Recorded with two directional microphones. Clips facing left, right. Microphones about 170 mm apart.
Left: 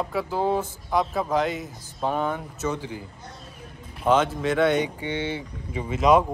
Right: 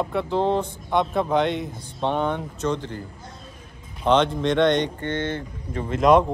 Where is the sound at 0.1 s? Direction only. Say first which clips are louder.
Right 1 dB; 5° left (ahead or behind).